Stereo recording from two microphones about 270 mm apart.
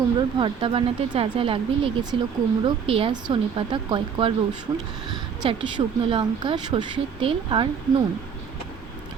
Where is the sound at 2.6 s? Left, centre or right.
Centre.